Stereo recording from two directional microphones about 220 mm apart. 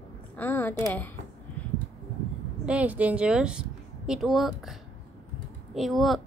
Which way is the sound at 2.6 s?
5° right (ahead or behind).